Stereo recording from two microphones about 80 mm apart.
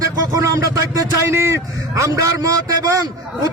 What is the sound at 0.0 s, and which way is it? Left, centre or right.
A man's voice, right.